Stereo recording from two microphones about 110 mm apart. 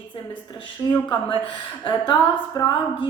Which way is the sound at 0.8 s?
40° left (ahead or behind).